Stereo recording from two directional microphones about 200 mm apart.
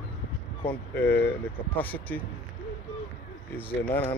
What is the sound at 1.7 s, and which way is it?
Speech, 10° left (ahead or behind).